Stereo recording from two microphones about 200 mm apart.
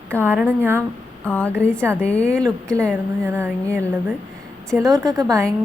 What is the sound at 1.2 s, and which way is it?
A woman's voice, 5° left (ahead or behind).